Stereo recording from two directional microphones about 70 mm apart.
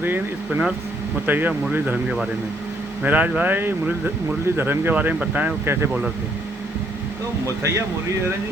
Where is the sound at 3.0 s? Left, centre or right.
Right.